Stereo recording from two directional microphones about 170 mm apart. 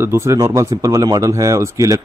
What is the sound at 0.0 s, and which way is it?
A man's voice, 15° right (ahead or behind).